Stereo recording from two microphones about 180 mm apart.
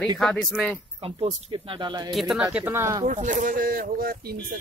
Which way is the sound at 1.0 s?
30° right (ahead or behind).